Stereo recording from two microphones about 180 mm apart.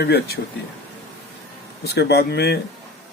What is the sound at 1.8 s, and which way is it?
Speech, 65° left (ahead or behind).